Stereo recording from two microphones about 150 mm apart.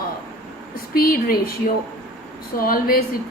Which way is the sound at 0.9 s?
80° left.